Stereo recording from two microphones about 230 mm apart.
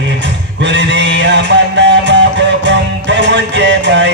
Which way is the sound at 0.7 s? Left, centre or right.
Right.